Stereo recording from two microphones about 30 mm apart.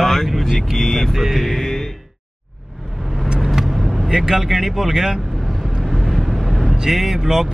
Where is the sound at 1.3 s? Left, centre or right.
Centre.